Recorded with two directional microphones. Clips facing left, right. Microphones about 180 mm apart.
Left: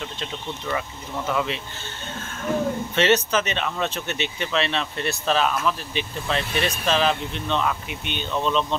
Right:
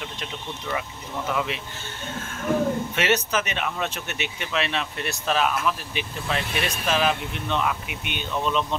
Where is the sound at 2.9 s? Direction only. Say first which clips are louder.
Left 8 dB; 10° right (ahead or behind).